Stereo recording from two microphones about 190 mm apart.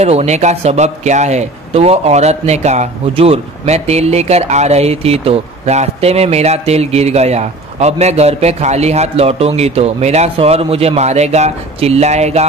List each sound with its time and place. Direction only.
0.0 s speech: 35° right (ahead or behind)